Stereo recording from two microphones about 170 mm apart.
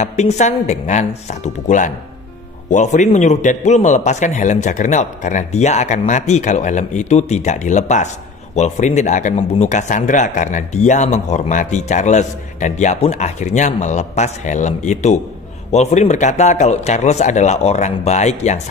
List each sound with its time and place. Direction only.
0.0 s speech: 45° left (ahead or behind)